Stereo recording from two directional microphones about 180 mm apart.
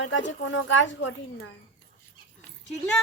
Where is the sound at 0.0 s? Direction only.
90° left.